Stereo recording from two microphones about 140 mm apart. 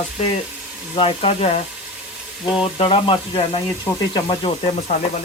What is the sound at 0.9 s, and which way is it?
Speech, 45° left (ahead or behind).